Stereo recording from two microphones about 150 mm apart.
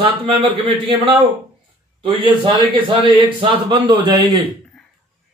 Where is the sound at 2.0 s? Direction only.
35° right (ahead or behind).